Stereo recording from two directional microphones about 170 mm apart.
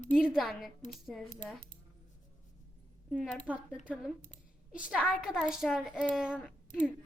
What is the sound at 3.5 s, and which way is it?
Speech, 10° right (ahead or behind).